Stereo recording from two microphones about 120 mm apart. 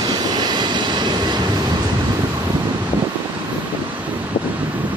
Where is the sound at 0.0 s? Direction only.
35° right (ahead or behind).